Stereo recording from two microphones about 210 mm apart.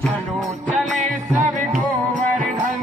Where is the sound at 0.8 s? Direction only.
Centre (ahead or behind).